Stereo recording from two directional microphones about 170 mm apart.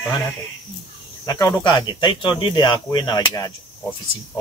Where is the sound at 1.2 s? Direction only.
20° left (ahead or behind).